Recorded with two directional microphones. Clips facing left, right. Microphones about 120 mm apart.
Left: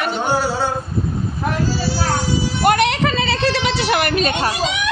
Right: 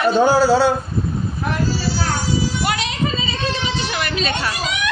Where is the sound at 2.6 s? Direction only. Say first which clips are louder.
Left 6 dB; 55° left (ahead or behind).